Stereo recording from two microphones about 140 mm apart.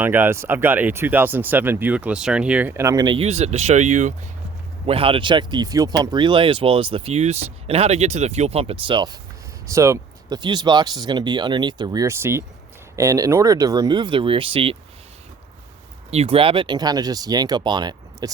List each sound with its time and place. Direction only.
0.0 s speech: 15° right (ahead or behind)
3.2 s speech: 50° right (ahead or behind)
4.9 s speech: 40° right (ahead or behind)
9.6 s speech: 20° right (ahead or behind); by 14.8 s 40° right (ahead or behind)
16.0 s speech: 45° right (ahead or behind); by 18.3 s 30° right (ahead or behind)